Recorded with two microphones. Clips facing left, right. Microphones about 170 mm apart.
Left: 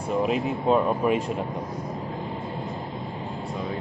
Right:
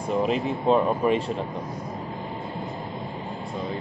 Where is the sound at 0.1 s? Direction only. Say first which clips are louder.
Even; 5° left (ahead or behind).